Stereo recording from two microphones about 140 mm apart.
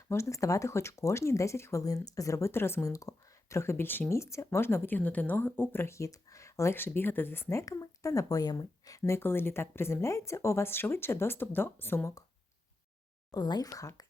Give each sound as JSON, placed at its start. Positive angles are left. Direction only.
{"t": 0.1, "sound": "speech", "side_deg": 20}
{"t": 13.3, "sound": "speech", "side_deg": 30}